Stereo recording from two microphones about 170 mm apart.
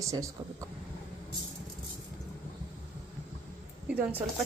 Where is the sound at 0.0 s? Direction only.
20° right (ahead or behind).